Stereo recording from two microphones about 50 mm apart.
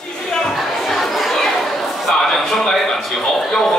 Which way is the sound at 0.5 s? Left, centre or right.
Centre.